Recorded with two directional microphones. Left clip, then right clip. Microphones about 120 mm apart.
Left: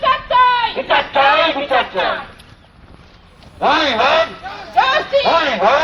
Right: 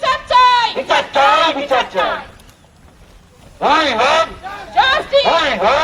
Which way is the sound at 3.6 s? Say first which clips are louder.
Right 1 dB; 25° right (ahead or behind).